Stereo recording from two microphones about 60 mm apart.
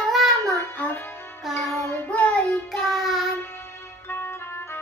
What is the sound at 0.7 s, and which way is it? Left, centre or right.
Music, left.